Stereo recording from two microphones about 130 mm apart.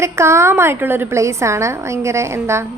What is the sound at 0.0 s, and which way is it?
A woman's voice, 20° right (ahead or behind).